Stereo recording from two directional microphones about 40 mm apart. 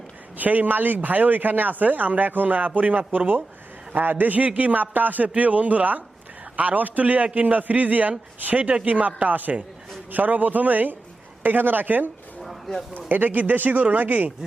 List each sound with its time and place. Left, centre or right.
0.3 s a man's voice: right
12.4 s a sound: centre
13.1 s speech: right